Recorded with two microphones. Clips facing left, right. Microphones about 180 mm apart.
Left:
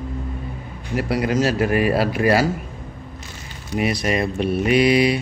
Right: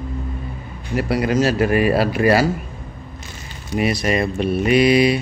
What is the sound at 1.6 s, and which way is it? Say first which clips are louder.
Speech: right 2 dB; centre (ahead or behind).